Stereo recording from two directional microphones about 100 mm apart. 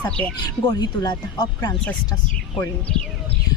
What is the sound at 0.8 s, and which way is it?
Speech, 45° left (ahead or behind).